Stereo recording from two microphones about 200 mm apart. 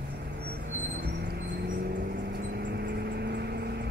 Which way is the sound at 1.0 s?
55° right (ahead or behind).